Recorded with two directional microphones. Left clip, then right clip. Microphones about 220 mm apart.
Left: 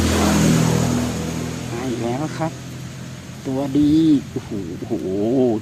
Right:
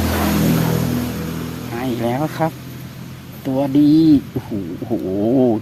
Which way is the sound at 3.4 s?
40° right (ahead or behind).